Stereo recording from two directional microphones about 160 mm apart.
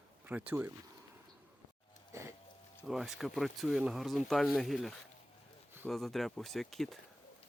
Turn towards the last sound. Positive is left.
turn(degrees=0)  # may be behind; listen again after turning